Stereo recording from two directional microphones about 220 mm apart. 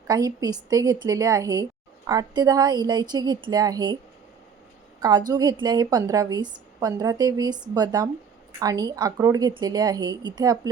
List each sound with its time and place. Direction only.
0.1 s a woman's voice: 15° right (ahead or behind)
5.3 s a woman's voice: 20° right (ahead or behind)